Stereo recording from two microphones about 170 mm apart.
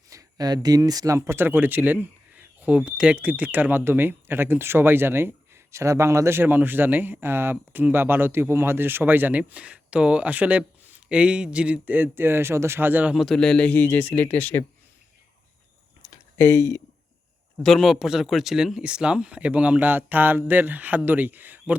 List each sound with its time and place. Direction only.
0.1 s speech: 20° right (ahead or behind); by 14.6 s 10° left (ahead or behind)
16.0 s a sound: 15° left (ahead or behind)
17.6 s speech: centre (ahead or behind)